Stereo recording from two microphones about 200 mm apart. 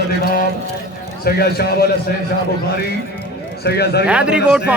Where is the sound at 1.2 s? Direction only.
50° left (ahead or behind).